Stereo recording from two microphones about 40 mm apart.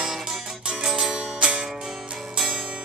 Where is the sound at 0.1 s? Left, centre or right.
Centre.